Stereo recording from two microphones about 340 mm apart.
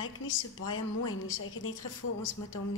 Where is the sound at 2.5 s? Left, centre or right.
Left.